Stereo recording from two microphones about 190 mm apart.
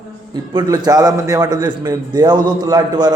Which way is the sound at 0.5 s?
20° right (ahead or behind).